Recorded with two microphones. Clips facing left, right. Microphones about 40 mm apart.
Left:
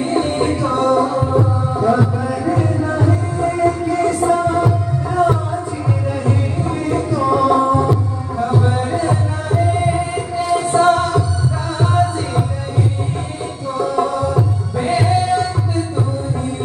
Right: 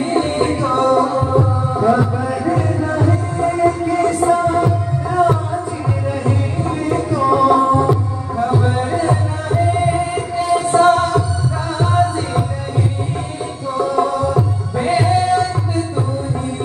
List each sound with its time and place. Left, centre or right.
0.1 s music: centre
6.9 s music: centre
13.7 s music: centre